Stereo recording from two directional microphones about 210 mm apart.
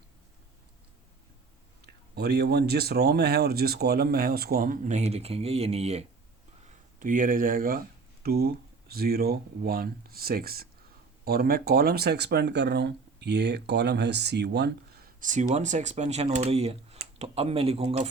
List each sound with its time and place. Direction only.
2.1 s speech: 50° right (ahead or behind); by 18.1 s 30° right (ahead or behind)